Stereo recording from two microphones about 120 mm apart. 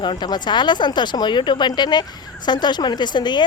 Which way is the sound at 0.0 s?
40° left (ahead or behind).